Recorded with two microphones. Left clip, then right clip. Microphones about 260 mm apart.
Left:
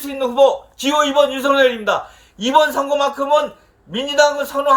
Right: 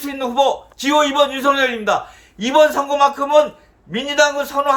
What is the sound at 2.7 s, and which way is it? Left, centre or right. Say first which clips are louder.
Speech: right 2 dB; right.